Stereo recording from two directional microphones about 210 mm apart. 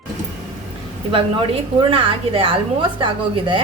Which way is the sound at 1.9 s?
25° right (ahead or behind).